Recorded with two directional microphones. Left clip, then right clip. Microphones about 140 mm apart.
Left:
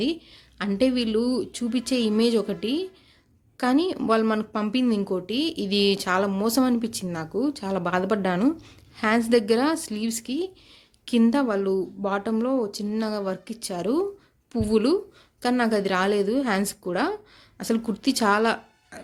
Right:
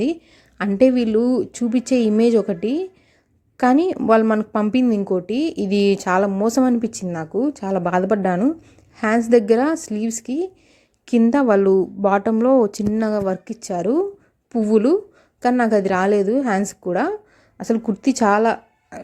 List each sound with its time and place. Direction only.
0.0 s a woman's voice: 45° right (ahead or behind)